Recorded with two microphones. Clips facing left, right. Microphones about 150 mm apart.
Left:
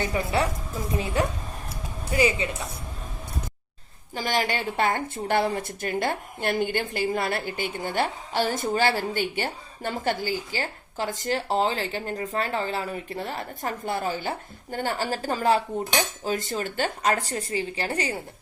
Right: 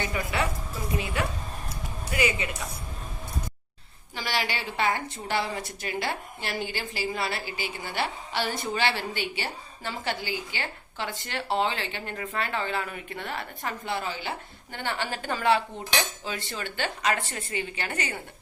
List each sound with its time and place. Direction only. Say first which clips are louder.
0.1 s a woman's voice: left 4 dB; 30° left (ahead or behind)
4.1 s a woman's voice: left 4 dB; 45° left (ahead or behind)